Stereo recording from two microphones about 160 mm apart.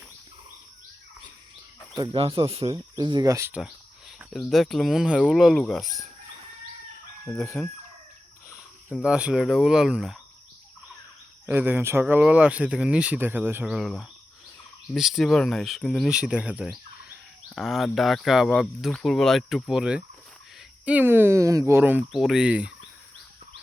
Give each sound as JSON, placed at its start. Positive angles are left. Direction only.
{"t": 2.1, "sound": "speech", "side_deg": -35}
{"t": 2.7, "sound": "speech", "side_deg": -25}
{"t": 4.2, "sound": "speech", "side_deg": 0}
{"t": 7.4, "sound": "chicken", "side_deg": 10}
{"t": 8.5, "sound": "speech", "side_deg": -5}
{"t": 11.4, "sound": "speech", "side_deg": -10}